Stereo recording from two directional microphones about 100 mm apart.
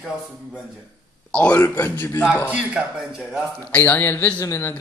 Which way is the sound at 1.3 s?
15° left (ahead or behind).